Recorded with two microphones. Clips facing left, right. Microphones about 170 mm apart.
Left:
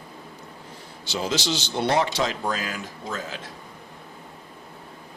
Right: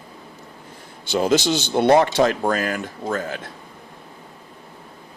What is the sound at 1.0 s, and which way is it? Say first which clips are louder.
Speech: right 8 dB; 55° right (ahead or behind).